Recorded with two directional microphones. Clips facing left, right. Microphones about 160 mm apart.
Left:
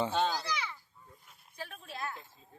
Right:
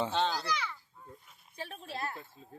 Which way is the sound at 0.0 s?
10° left (ahead or behind).